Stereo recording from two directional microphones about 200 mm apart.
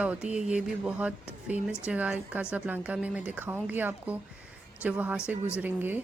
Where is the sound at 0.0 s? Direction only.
5° right (ahead or behind).